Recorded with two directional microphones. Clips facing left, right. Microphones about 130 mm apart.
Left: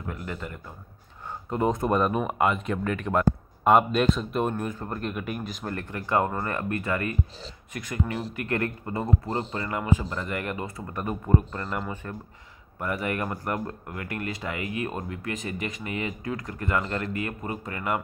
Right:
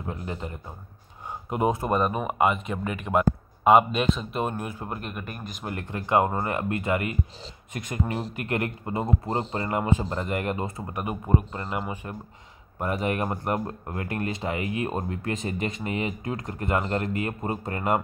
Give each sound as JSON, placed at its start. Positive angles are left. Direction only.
{"t": 0.0, "sound": "speech", "side_deg": -25}
{"t": 1.5, "sound": "speech", "side_deg": -10}
{"t": 5.1, "sound": "speech", "side_deg": 0}
{"t": 5.7, "sound": "speech", "side_deg": -20}
{"t": 10.9, "sound": "speech", "side_deg": -15}